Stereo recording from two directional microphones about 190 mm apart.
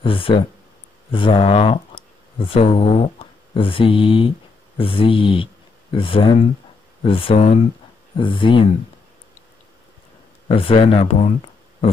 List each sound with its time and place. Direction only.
0.0 s speech: 30° left (ahead or behind)
8.2 s speech: 25° left (ahead or behind)
10.5 s speech: 30° left (ahead or behind)